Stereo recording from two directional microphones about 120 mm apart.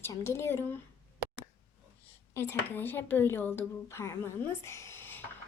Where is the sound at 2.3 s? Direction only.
20° left (ahead or behind).